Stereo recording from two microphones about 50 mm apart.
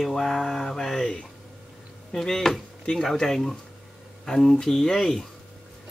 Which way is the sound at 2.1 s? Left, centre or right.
Centre.